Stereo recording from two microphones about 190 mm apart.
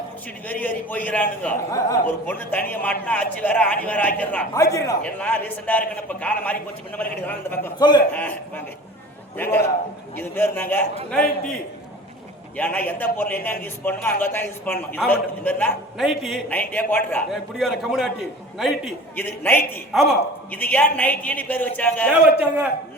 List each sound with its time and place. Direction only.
0.4 s a man's voice: 10° left (ahead or behind)
7.8 s a man's voice: 20° left (ahead or behind)
8.1 s a man's voice: 10° left (ahead or behind)
12.5 s a man's voice: 10° left (ahead or behind)
16.5 s a man's voice: 10° left (ahead or behind)
19.1 s a man's voice: 10° left (ahead or behind)
19.9 s a man's voice: centre (ahead or behind)
22.2 s a man's voice: 5° right (ahead or behind)